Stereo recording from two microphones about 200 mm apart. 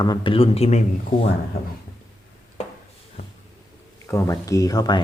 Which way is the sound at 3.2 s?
30° left (ahead or behind).